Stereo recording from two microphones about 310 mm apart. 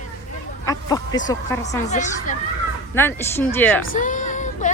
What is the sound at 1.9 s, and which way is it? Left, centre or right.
Speech, left.